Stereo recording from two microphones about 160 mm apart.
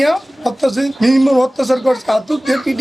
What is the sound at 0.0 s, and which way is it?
Speech, centre (ahead or behind).